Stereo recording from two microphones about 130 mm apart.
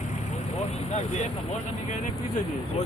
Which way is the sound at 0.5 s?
60° left (ahead or behind).